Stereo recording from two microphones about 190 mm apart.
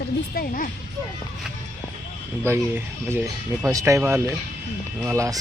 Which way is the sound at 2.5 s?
10° right (ahead or behind).